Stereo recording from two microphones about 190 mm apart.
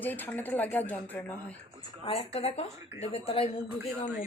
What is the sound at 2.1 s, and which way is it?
Speech, 30° left (ahead or behind).